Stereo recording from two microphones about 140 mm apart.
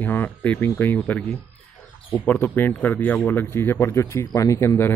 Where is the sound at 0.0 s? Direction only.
15° left (ahead or behind).